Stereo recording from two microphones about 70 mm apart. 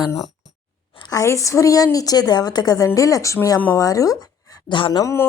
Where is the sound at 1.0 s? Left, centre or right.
Left.